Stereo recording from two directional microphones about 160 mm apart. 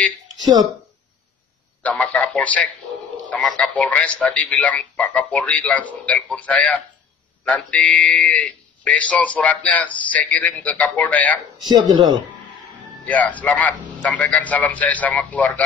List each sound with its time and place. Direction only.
1.8 s speech: 10° left (ahead or behind)
11.7 s speech: 25° right (ahead or behind)
13.0 s speech: 10° left (ahead or behind)